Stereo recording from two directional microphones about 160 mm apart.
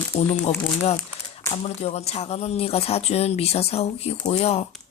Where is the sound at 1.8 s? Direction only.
40° left (ahead or behind).